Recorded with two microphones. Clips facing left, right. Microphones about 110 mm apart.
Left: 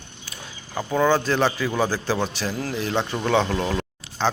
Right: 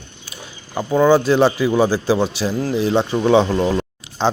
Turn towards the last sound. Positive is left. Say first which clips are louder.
# right 4 dB
turn(degrees=-15)  # may be behind; listen again after turning